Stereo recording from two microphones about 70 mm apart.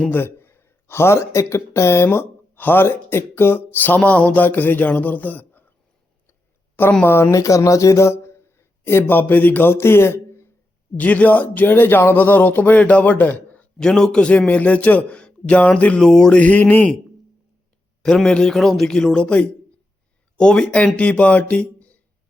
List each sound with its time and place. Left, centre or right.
0.1 s speech: left
2.0 s speech: left
7.0 s speech: left
10.9 s speech: left
13.7 s a man's voice: centre; by 16.9 s left
18.0 s a man's voice: centre